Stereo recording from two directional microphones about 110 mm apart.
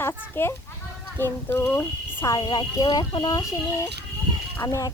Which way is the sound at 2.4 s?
45° left (ahead or behind).